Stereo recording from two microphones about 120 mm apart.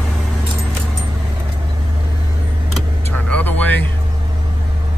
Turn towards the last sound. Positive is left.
turn(degrees=15)  # may be behind; listen again after turning